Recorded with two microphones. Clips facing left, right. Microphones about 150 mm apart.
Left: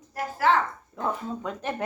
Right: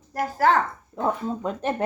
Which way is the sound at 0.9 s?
30° right (ahead or behind).